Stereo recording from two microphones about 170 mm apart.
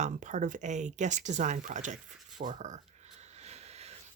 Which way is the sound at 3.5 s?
40° right (ahead or behind).